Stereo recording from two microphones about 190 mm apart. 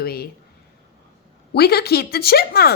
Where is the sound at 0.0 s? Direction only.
55° left (ahead or behind).